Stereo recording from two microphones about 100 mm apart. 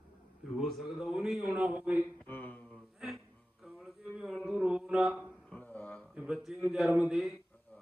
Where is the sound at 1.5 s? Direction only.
15° right (ahead or behind).